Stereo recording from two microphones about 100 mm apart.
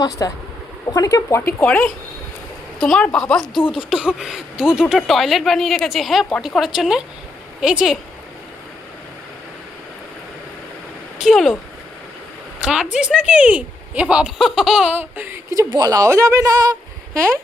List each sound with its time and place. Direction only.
0.2 s speech: 35° left (ahead or behind)
1.5 s speech: 20° left (ahead or behind)
2.8 s speech: 5° left (ahead or behind)
3.6 s speech: 60° left (ahead or behind)
3.8 s speech: 10° right (ahead or behind)
11.2 s speech: centre (ahead or behind)
12.5 s speech: 10° right (ahead or behind)
14.9 s speech: 20° right (ahead or behind)
15.7 s speech: 40° right (ahead or behind)
17.2 s speech: 25° right (ahead or behind)